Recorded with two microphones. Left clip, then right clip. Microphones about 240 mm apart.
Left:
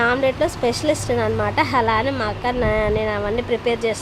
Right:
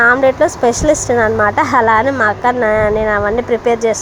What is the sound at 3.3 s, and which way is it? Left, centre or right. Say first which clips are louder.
Speech: right 7 dB; right.